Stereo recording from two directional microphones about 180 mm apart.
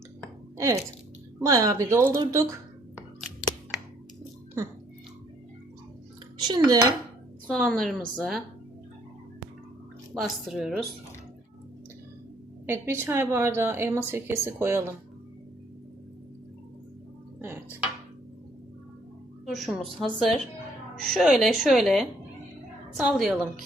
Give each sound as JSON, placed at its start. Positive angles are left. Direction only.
{"t": 0.5, "sound": "a sound", "side_deg": -15}
{"t": 1.4, "sound": "a woman's voice", "side_deg": -20}
{"t": 2.9, "sound": "a sound", "side_deg": 0}
{"t": 6.4, "sound": "speech", "side_deg": -25}
{"t": 7.5, "sound": "a woman's voice", "side_deg": 5}
{"t": 10.2, "sound": "a woman's voice", "side_deg": 0}
{"t": 12.6, "sound": "a woman's voice", "side_deg": -15}
{"t": 17.4, "sound": "dishes", "side_deg": -10}
{"t": 19.5, "sound": "a woman's voice", "side_deg": 0}